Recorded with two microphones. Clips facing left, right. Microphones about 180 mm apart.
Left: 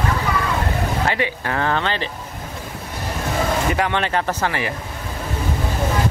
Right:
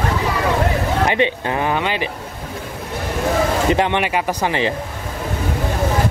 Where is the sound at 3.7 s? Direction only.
20° right (ahead or behind).